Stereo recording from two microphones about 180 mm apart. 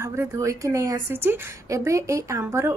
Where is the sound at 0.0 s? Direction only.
15° right (ahead or behind).